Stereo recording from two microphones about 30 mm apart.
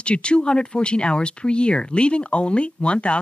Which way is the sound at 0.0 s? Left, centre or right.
Left.